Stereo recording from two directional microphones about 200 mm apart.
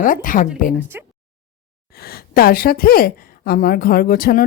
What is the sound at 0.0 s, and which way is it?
Speech, 40° left (ahead or behind).